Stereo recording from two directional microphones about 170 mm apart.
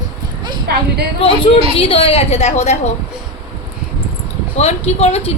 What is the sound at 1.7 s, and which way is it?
Speech, 35° left (ahead or behind).